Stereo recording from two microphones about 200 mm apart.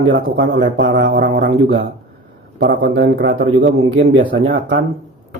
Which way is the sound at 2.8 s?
60° right (ahead or behind).